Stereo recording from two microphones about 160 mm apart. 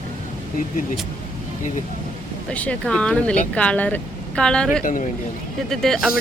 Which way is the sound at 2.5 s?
5° left (ahead or behind).